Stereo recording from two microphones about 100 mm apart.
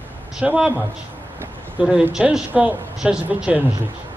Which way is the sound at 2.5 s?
20° right (ahead or behind).